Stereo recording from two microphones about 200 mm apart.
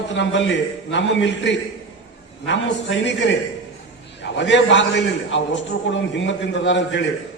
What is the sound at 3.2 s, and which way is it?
A man's voice, 65° left (ahead or behind).